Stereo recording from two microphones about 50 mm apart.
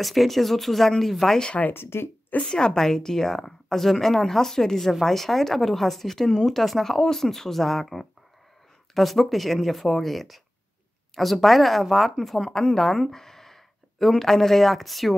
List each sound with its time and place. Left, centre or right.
0.0 s speech: centre
1.7 s speech: left
2.4 s a woman's voice: centre